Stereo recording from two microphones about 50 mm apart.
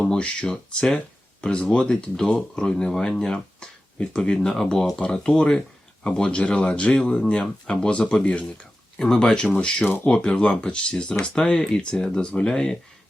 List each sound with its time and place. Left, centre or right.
0.0 s speech: centre
9.8 s speech: left
10.1 s speech: left